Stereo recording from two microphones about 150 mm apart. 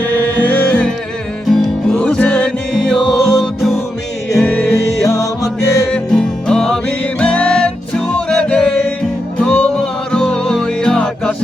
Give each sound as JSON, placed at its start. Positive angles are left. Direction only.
{"t": 0.0, "sound": "music", "side_deg": 10}
{"t": 5.0, "sound": "music", "side_deg": 20}
{"t": 5.9, "sound": "music", "side_deg": 5}